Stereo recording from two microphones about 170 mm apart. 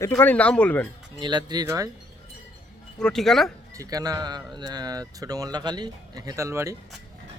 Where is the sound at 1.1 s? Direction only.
25° right (ahead or behind).